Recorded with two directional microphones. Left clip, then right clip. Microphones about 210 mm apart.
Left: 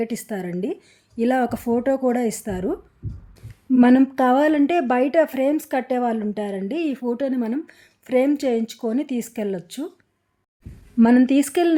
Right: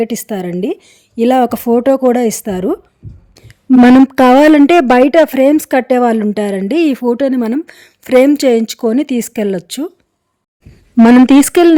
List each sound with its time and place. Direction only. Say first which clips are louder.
0.0 s a woman's voice: right 10 dB; 45° right (ahead or behind)
11.0 s a woman's voice: right 10 dB; 55° right (ahead or behind)